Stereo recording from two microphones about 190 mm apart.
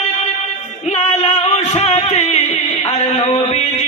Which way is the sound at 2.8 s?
30° left (ahead or behind).